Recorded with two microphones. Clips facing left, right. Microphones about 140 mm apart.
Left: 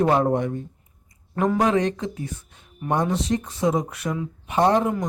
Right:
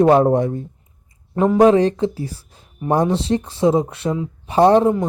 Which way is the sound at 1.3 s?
25° right (ahead or behind).